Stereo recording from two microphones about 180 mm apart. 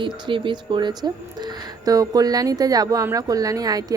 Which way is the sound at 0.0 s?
25° right (ahead or behind).